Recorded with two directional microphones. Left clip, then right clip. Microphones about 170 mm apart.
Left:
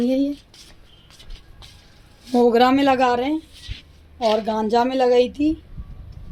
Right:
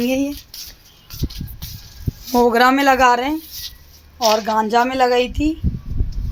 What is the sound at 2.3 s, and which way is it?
Speech, 5° left (ahead or behind).